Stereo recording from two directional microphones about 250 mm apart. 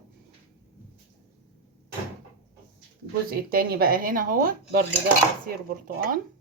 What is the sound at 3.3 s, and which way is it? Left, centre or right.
Speech, right.